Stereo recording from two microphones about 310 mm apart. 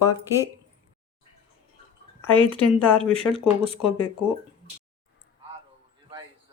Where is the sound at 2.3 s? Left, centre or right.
Centre.